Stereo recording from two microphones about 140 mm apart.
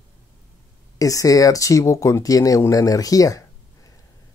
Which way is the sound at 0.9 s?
25° left (ahead or behind).